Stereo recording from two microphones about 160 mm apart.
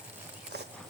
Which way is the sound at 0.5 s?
90° right.